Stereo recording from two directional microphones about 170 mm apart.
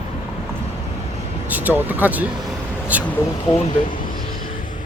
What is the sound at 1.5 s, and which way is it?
Speech, 10° right (ahead or behind).